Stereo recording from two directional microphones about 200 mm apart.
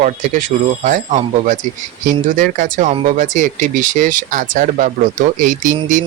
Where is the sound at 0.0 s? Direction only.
40° right (ahead or behind).